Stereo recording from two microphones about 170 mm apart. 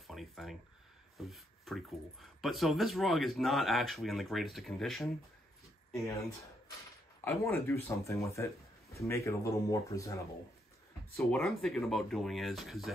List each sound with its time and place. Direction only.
0.0 s speech: centre (ahead or behind)
7.2 s speech: 15° left (ahead or behind)
11.1 s speech: centre (ahead or behind)